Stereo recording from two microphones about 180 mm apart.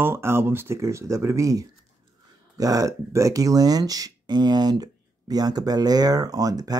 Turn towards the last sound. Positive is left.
turn(degrees=-20)  # may be behind; listen again after turning